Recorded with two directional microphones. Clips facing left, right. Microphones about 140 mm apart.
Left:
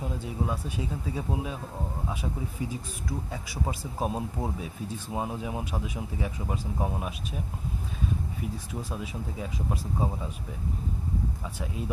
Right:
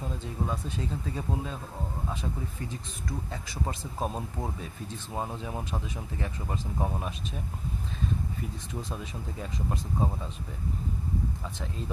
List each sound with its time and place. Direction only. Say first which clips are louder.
0.0 s speech: left 2 dB; 10° left (ahead or behind)
11.4 s speech: left 2 dB; 10° left (ahead or behind)